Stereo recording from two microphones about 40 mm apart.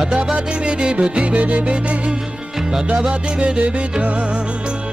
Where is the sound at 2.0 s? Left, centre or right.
Centre.